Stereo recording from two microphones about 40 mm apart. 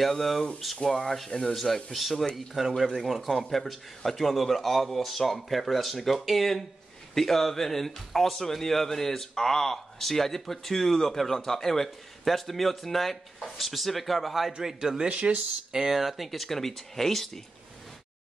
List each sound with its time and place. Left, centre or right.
0.0 s speech: centre
15.0 s speech: right
15.7 s speech: centre